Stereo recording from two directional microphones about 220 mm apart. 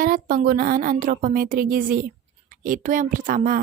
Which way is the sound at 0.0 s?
40° right (ahead or behind).